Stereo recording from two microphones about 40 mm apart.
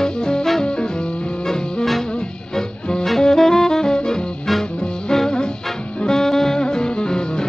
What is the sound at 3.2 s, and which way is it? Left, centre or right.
Saxophone, centre.